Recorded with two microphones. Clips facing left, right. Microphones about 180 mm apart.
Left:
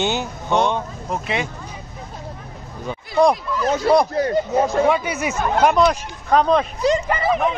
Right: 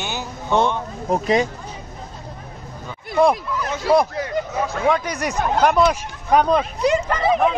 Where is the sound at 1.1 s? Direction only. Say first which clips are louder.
Right 6 dB; 40° right (ahead or behind).